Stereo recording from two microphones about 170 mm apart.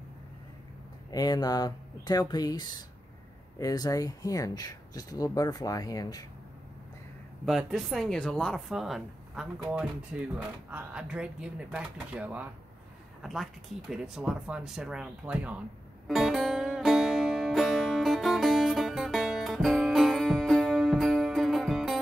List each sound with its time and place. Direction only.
1.1 s speech: 25° left (ahead or behind)
7.4 s speech: centre (ahead or behind)
16.1 s music: centre (ahead or behind)